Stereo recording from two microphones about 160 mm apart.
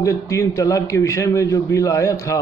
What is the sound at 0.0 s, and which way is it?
A man's voice, 20° left (ahead or behind).